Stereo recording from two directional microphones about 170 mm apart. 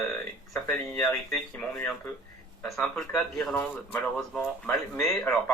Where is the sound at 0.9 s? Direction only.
5° left (ahead or behind).